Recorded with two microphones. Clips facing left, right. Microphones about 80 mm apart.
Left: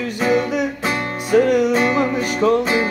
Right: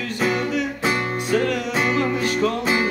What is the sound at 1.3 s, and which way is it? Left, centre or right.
Music, left.